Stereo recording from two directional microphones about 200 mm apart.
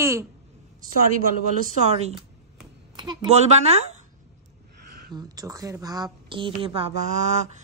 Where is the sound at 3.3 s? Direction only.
35° right (ahead or behind).